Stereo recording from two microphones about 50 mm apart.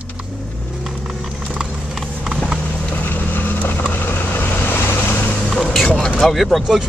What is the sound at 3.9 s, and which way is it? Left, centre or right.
Vehicle, left.